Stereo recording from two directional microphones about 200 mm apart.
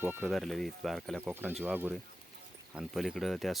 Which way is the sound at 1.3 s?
10° right (ahead or behind).